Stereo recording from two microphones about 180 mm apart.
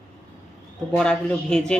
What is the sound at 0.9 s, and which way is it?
Speech, 5° left (ahead or behind).